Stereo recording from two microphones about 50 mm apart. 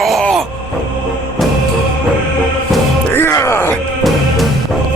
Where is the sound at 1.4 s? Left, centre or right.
Centre.